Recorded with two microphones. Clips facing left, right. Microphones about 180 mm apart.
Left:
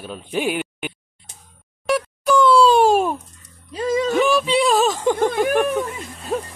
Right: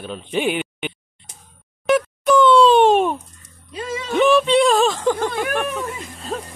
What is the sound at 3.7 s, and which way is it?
Music, 40° left (ahead or behind).